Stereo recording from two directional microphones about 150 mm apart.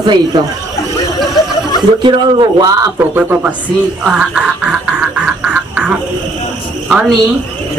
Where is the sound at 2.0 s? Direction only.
30° right (ahead or behind).